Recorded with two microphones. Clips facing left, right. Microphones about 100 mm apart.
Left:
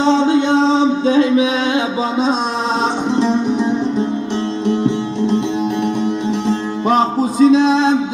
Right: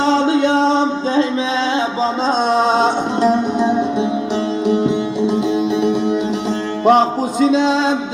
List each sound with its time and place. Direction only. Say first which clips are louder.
0.0 s a sound: left 1 dB; centre (ahead or behind)
1.1 s music: left 3 dB; 30° right (ahead or behind)
2.6 s music: right 3 dB; centre (ahead or behind)
6.5 s music: right 4 dB; centre (ahead or behind)